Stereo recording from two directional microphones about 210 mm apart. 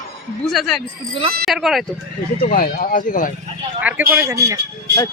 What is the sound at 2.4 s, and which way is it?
Speech, 45° left (ahead or behind).